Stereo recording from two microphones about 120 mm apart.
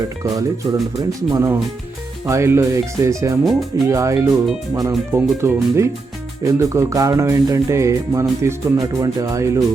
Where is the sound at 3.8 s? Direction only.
25° right (ahead or behind).